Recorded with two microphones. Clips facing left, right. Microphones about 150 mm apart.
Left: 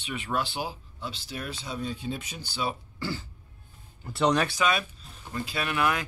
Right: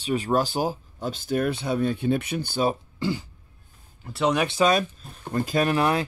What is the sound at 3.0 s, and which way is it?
Throat clearing, 20° right (ahead or behind).